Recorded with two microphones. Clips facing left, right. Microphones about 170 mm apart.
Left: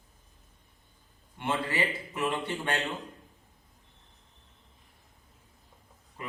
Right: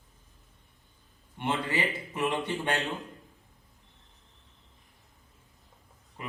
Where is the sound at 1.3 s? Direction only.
20° right (ahead or behind).